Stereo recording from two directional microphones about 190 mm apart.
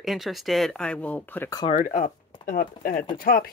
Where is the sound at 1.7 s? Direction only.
40° left (ahead or behind).